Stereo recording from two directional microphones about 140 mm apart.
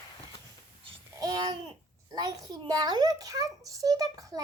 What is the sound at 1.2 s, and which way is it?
Babbling, 25° right (ahead or behind).